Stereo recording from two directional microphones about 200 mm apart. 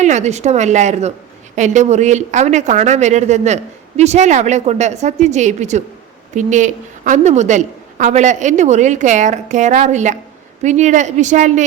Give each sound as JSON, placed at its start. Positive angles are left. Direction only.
{"t": 0.0, "sound": "speech", "side_deg": -35}